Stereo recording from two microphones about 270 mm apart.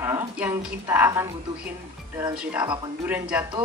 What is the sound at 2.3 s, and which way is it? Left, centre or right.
Speech, centre.